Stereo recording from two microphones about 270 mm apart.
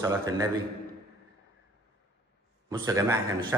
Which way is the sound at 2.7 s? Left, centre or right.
Centre.